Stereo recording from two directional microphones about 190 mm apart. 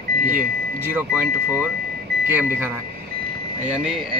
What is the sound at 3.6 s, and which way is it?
Speech, 5° right (ahead or behind).